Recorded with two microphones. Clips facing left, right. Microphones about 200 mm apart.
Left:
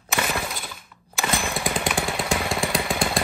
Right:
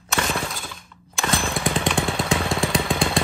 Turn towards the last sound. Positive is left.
turn(degrees=0)  # may be behind; listen again after turning